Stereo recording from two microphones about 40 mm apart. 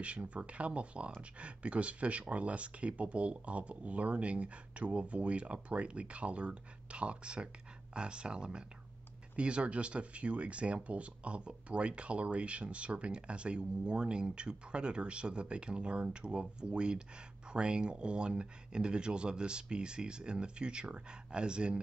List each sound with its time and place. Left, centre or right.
0.0 s speech: right